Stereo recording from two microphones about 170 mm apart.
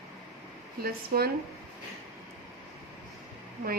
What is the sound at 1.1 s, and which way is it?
Speech, 60° right (ahead or behind).